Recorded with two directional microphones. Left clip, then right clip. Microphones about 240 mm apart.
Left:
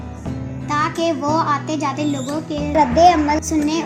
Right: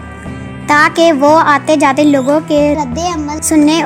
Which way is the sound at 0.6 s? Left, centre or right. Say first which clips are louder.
Right 11 dB; right.